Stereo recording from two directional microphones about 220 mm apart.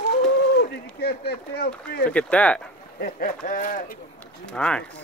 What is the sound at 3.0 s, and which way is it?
Speech, 40° left (ahead or behind).